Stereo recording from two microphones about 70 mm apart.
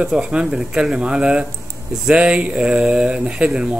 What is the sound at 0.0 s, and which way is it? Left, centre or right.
Speech, centre.